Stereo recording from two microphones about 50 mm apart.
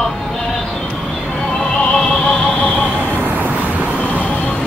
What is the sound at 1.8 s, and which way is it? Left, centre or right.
Music, centre.